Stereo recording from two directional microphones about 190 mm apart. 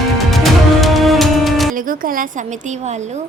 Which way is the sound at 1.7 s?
45° right (ahead or behind).